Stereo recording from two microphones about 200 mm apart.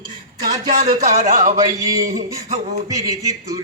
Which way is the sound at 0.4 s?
45° right (ahead or behind).